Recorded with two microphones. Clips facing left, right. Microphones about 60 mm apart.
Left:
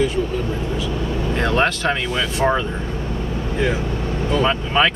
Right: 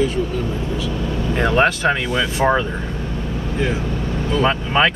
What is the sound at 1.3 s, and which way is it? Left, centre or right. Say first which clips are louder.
Speech: right 3 dB; centre.